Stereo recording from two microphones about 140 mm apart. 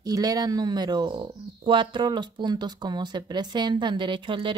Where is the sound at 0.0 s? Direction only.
25° right (ahead or behind).